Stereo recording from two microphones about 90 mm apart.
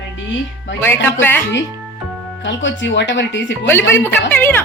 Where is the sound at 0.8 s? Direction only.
25° left (ahead or behind).